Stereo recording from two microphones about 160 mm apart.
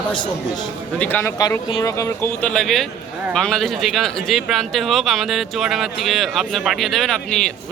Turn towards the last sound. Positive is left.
turn(degrees=5)  # may be behind; listen again after turning